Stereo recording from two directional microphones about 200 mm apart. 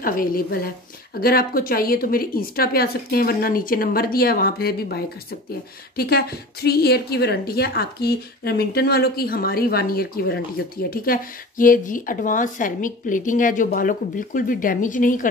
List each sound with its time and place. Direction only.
0.0 s a woman's voice: 45° left (ahead or behind)